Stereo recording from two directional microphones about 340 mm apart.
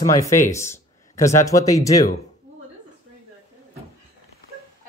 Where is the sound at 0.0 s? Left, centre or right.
Centre.